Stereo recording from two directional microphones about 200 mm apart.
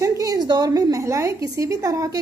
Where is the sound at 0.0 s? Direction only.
15° right (ahead or behind).